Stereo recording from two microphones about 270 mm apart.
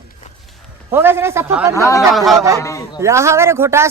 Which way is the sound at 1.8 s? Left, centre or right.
Centre.